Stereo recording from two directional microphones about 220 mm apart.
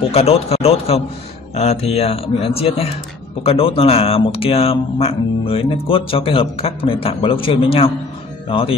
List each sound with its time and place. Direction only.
0.1 s speech: 25° left (ahead or behind)